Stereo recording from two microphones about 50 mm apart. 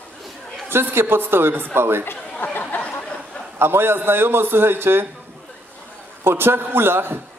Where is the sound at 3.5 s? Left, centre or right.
Right.